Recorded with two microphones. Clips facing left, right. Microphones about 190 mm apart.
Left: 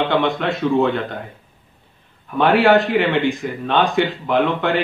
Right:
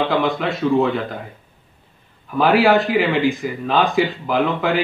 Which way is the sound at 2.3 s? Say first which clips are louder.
Left 1 dB; centre (ahead or behind).